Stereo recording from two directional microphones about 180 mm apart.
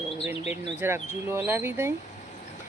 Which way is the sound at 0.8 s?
15° right (ahead or behind).